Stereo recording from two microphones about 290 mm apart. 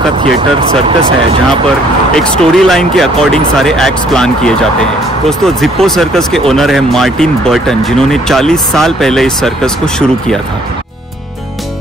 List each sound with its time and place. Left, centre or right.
0.2 s speech: centre
2.1 s speech: centre